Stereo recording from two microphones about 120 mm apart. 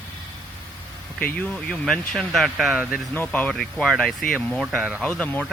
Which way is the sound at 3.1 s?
15° left (ahead or behind).